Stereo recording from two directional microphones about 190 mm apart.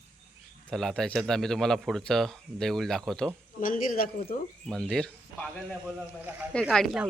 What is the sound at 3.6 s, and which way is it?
Speech, 45° left (ahead or behind).